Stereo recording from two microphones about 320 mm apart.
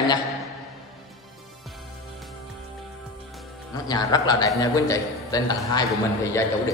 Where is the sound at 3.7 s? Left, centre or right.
Centre.